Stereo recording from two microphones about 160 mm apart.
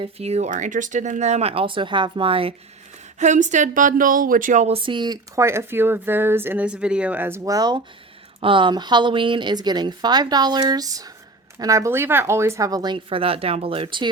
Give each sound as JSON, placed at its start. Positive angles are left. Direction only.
{"t": 0.0, "sound": "speech", "side_deg": -40}
{"t": 3.2, "sound": "speech", "side_deg": -50}